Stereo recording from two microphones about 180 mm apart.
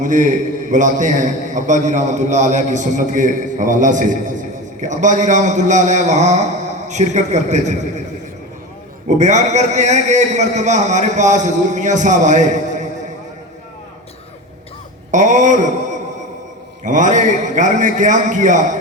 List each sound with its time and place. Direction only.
0.0 s a man's voice: 45° right (ahead or behind)
9.0 s a man's voice: 40° right (ahead or behind)
15.1 s a sound: 45° right (ahead or behind)
16.8 s a man's voice: 45° right (ahead or behind)